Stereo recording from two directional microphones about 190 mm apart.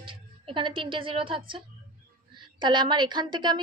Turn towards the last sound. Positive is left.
turn(degrees=-25)  # may be behind; listen again after turning